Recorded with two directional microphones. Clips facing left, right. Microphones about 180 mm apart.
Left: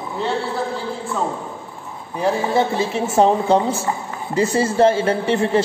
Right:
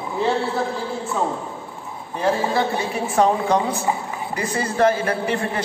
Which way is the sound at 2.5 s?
25° left (ahead or behind).